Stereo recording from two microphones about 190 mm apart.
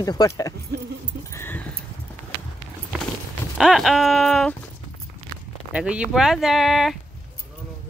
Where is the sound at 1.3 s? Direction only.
10° left (ahead or behind).